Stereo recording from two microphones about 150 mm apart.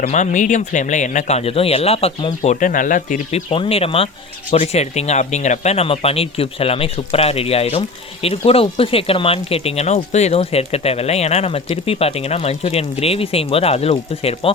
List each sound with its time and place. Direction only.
0.0 s speech: 55° left (ahead or behind)
2.6 s speech: 60° left (ahead or behind)
3.5 s speech: 40° left (ahead or behind)